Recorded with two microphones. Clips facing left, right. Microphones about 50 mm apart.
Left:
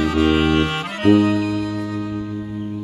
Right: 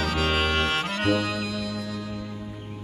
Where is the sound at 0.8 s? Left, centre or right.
Left.